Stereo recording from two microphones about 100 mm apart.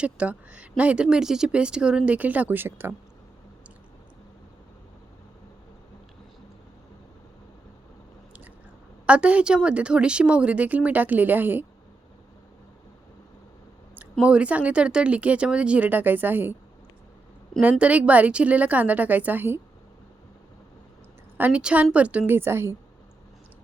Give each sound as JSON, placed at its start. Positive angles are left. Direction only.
{"t": 0.0, "sound": "speech", "side_deg": -10}
{"t": 9.0, "sound": "speech", "side_deg": -10}
{"t": 13.9, "sound": "speech", "side_deg": -15}
{"t": 17.6, "sound": "speech", "side_deg": -15}
{"t": 21.3, "sound": "speech", "side_deg": -15}
{"t": 22.3, "sound": "a woman's voice", "side_deg": -25}